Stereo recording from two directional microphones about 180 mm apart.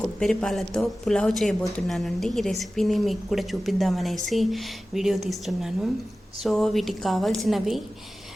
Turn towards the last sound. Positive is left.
turn(degrees=0)  # may be behind; listen again after turning